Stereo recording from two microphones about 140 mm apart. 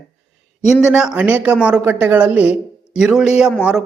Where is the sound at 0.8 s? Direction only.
5° right (ahead or behind).